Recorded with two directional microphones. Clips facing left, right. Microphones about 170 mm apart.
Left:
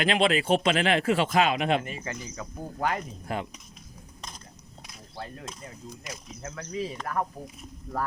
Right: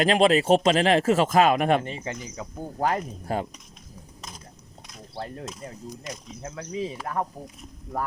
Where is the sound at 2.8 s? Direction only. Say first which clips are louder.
Right 4 dB; 35° right (ahead or behind).